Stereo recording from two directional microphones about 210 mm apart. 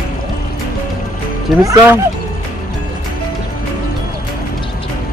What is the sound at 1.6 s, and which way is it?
Speech, 15° right (ahead or behind).